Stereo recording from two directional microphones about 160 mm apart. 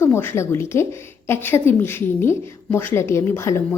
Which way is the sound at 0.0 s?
15° left (ahead or behind).